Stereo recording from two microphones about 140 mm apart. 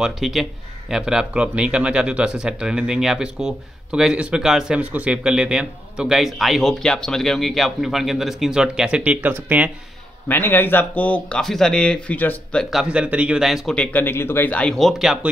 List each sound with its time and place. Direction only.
0.0 s speech: centre (ahead or behind)
10.2 s speech: 15° left (ahead or behind)
12.6 s speech: 5° right (ahead or behind)